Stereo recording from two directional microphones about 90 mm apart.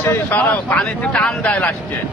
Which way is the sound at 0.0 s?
25° left (ahead or behind).